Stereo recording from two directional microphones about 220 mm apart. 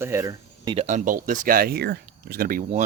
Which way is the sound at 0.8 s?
35° right (ahead or behind).